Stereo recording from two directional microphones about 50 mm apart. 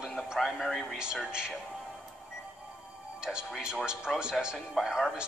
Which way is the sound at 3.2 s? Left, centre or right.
Centre.